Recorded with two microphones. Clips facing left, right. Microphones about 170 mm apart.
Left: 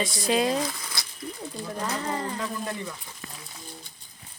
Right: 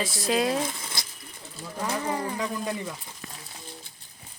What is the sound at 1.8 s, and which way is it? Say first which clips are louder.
Speech: right 2 dB; 10° right (ahead or behind).